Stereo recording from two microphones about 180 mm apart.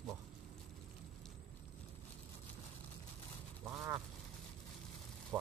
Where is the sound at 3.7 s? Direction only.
15° right (ahead or behind).